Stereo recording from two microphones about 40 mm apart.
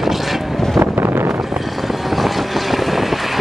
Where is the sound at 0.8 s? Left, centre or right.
Right.